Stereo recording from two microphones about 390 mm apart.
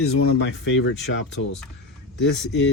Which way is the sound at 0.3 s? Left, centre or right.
Left.